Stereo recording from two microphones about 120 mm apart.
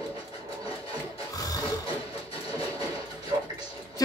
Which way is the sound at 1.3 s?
30° left (ahead or behind).